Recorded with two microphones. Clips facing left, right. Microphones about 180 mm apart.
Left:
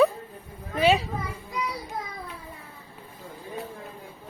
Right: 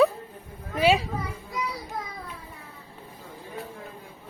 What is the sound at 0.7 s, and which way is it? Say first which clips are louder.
Children playing: even; 10° right (ahead or behind).